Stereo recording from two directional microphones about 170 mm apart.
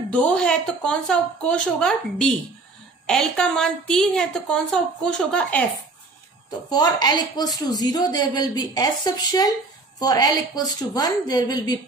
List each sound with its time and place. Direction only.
0.1 s a woman's voice: 5° left (ahead or behind)
6.7 s a woman's voice: 25° left (ahead or behind)